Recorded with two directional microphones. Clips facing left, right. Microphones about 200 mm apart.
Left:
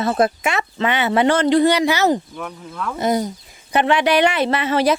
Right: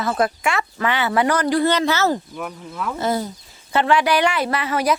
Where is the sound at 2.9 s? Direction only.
20° left (ahead or behind).